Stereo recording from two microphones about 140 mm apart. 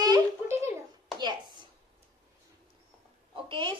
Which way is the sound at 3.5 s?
35° right (ahead or behind).